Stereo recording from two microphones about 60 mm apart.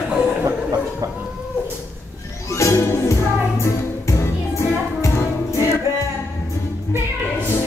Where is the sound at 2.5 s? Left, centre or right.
Left.